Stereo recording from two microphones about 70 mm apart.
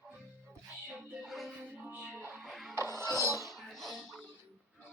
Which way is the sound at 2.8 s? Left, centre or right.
Right.